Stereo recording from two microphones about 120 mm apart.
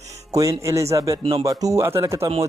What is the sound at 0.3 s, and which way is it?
Speech, 25° right (ahead or behind).